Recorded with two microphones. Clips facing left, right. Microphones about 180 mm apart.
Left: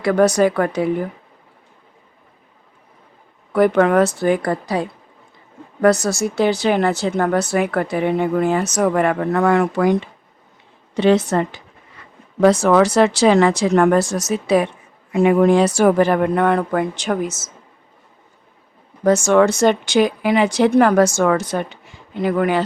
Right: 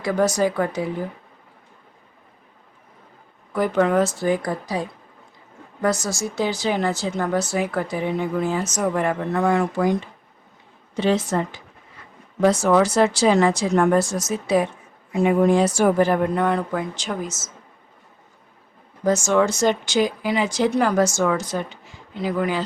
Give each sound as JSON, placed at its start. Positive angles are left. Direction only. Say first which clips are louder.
{"t": 0.0, "sound": "speech", "louder": "left 5 dB", "side_deg": 65}
{"t": 3.5, "sound": "speech", "louder": "left 5 dB", "side_deg": 65}
{"t": 19.0, "sound": "speech", "louder": "left 5 dB", "side_deg": 65}